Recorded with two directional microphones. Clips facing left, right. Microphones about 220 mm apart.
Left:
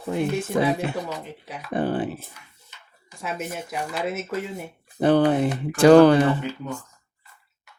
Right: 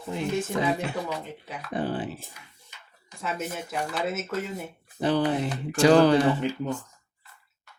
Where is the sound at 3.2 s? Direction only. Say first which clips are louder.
Left 1 dB; 10° left (ahead or behind).